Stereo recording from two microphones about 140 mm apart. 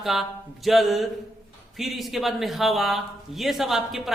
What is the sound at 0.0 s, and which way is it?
A man's voice, centre (ahead or behind).